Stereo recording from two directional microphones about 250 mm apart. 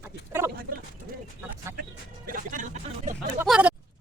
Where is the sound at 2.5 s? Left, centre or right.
Right.